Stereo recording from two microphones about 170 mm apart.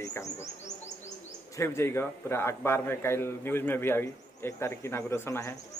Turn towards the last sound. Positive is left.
turn(degrees=15)  # may be behind; listen again after turning